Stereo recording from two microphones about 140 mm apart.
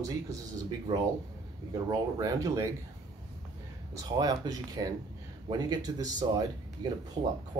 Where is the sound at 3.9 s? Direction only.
25° right (ahead or behind).